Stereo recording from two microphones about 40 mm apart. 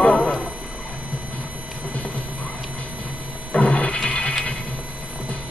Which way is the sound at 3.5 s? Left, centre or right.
Left.